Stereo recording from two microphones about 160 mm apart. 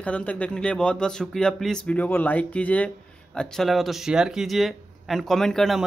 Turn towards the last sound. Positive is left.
turn(degrees=0)  # may be behind; listen again after turning